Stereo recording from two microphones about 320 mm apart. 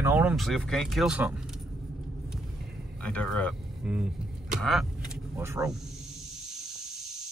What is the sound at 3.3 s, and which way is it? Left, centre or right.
Speech, centre.